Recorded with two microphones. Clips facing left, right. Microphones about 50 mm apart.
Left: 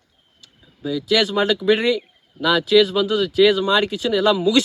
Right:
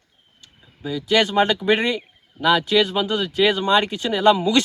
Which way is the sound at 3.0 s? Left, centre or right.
Centre.